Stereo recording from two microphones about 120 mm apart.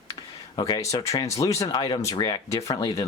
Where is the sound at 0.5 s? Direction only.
35° left (ahead or behind).